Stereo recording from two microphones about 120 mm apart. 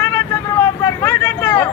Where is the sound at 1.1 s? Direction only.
15° left (ahead or behind).